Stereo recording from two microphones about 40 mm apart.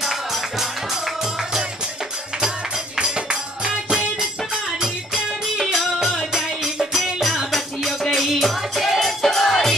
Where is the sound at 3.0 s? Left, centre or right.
Right.